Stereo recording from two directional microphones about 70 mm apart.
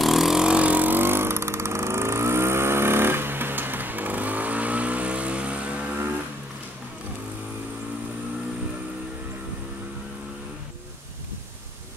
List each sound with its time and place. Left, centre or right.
0.0 s vehicle: centre